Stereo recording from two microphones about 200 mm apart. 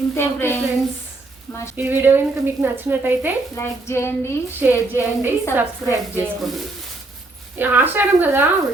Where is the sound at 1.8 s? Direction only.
10° right (ahead or behind).